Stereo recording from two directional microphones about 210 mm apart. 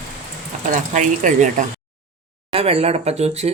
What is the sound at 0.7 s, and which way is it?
Speech, 35° right (ahead or behind).